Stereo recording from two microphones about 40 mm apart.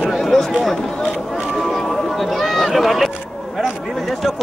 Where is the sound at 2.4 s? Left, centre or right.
Centre.